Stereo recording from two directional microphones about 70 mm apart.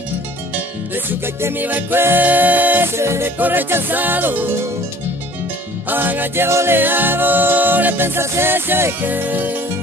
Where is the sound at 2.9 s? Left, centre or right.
Right.